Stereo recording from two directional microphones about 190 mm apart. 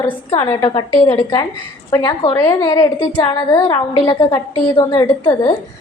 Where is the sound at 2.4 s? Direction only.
10° left (ahead or behind).